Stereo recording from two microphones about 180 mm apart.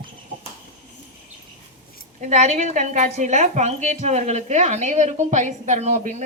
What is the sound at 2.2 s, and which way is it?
A woman's voice, 40° right (ahead or behind).